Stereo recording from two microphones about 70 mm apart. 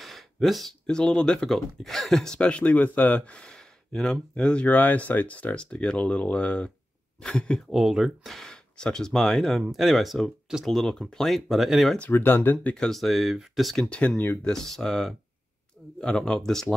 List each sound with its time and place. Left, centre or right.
0.0 s a sound: centre
0.8 s speech: centre
4.6 s speech: left
7.7 s speech: centre
12.1 s speech: left
12.7 s speech: centre
13.8 s speech: centre